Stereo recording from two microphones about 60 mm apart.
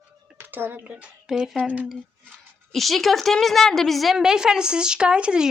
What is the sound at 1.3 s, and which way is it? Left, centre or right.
Speech, centre.